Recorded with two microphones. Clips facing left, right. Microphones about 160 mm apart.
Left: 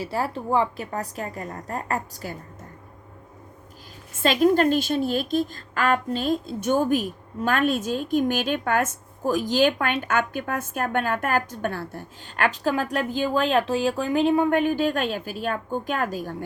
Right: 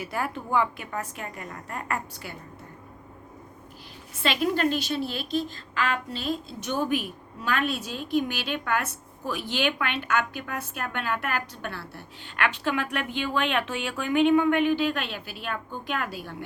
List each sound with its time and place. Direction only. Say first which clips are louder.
0.0 s a woman's voice: left 4 dB; 30° left (ahead or behind)
4.1 s a woman's voice: left 7 dB; 45° left (ahead or behind)